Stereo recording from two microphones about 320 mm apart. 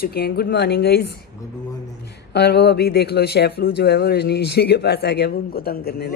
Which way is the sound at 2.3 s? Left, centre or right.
Left.